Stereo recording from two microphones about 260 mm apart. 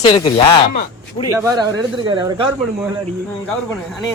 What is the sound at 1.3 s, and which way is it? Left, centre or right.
Speech, centre.